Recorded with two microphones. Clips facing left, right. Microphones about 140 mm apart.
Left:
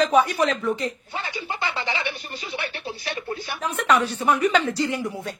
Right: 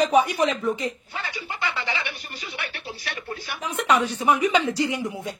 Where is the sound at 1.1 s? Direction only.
30° left (ahead or behind).